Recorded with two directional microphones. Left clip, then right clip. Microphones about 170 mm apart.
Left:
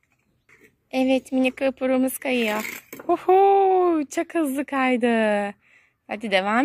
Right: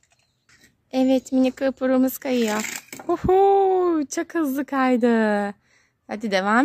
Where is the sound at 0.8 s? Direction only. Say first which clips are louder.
Right 1 dB; 20° right (ahead or behind).